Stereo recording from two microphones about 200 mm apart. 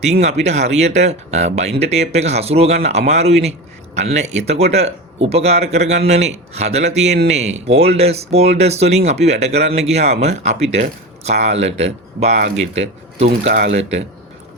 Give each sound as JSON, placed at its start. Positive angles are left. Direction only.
{"t": 0.0, "sound": "speech", "side_deg": -35}